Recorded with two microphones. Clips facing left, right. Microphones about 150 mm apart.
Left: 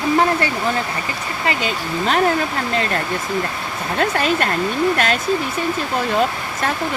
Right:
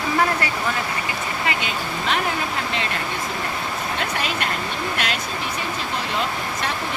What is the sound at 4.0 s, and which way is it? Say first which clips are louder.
Speech: left 10 dB; 45° left (ahead or behind).